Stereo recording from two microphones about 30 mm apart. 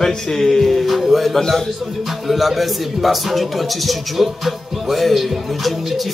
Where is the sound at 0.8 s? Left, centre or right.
Centre.